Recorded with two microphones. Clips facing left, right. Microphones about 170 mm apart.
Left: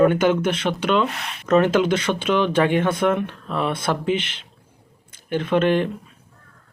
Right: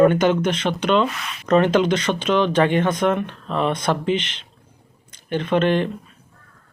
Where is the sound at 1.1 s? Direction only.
60° left (ahead or behind).